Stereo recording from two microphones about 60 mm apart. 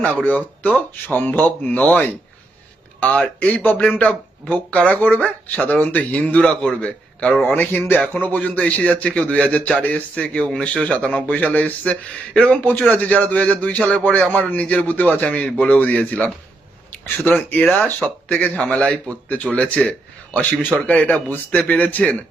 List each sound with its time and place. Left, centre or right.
0.0 s a man's voice: left
3.6 s a man's voice: left
7.4 s a man's voice: left
17.2 s a man's voice: left